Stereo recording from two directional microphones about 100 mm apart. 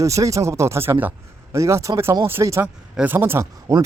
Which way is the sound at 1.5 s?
30° right (ahead or behind).